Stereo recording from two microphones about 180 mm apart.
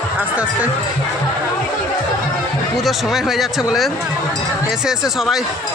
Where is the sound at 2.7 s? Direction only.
Centre (ahead or behind).